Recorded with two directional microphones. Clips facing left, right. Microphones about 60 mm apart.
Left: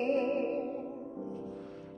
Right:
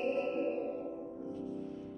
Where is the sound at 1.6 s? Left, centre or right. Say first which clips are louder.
Right 3 dB; left.